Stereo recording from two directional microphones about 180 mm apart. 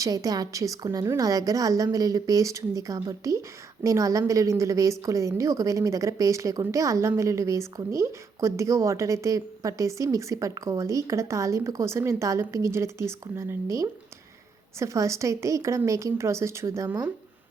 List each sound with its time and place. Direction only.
0.0 s a woman's voice: 20° right (ahead or behind)